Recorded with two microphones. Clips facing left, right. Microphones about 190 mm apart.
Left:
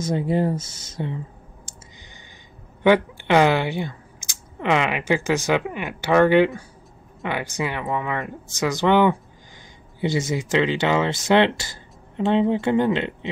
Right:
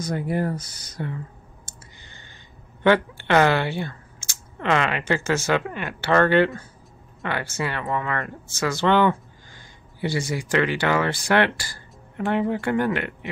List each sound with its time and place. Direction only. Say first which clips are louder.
0.0 s speech: left 3 dB; 25° left (ahead or behind)
1.7 s clicking: left 2 dB; 15° left (ahead or behind)
2.8 s speech: left 2 dB; 15° left (ahead or behind)